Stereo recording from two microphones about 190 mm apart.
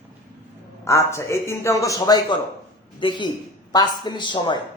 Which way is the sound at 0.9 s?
15° left (ahead or behind).